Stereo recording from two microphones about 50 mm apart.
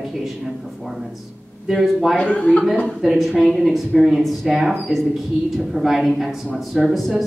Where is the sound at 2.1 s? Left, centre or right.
Left.